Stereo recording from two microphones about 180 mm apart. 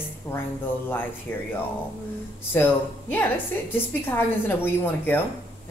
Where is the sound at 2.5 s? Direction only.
10° left (ahead or behind).